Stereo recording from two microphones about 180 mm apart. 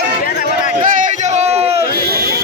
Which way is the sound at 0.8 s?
45° right (ahead or behind).